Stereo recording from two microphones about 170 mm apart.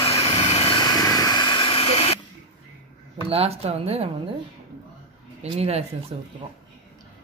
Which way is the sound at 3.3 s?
35° right (ahead or behind).